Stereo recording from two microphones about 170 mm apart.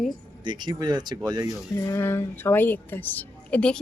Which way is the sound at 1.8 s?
20° left (ahead or behind).